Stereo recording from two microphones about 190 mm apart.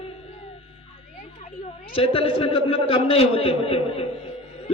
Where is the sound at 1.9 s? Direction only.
30° left (ahead or behind).